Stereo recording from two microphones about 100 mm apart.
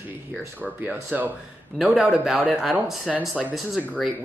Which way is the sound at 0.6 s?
15° right (ahead or behind).